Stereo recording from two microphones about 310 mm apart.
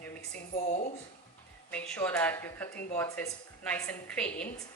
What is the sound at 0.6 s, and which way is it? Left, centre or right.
Speech, left.